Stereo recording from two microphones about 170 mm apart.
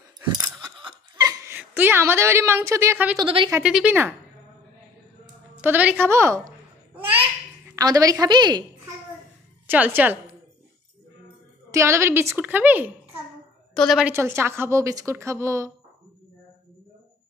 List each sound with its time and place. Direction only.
0.4 s a sound: 25° right (ahead or behind)
3.2 s speech: 30° right (ahead or behind)
3.6 s a woman's voice: 5° right (ahead or behind)
5.6 s a woman's voice: 10° right (ahead or behind)
7.7 s a woman's voice: 20° right (ahead or behind)
9.7 s a woman's voice: 10° right (ahead or behind)
11.7 s a woman's voice: 15° right (ahead or behind)
14.1 s a woman's voice: 15° right (ahead or behind)